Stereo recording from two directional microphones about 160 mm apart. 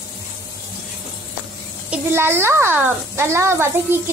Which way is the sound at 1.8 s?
15° right (ahead or behind).